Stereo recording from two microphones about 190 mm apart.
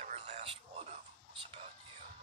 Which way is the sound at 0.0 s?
35° right (ahead or behind).